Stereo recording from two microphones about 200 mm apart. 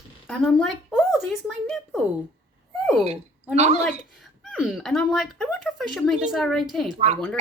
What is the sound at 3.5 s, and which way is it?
Speech, 35° right (ahead or behind).